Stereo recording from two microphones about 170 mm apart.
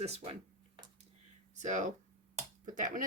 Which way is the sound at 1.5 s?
45° right (ahead or behind).